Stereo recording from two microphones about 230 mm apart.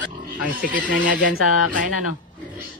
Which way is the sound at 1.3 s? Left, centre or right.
Left.